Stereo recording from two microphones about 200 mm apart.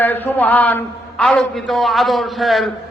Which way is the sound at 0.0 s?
10° left (ahead or behind).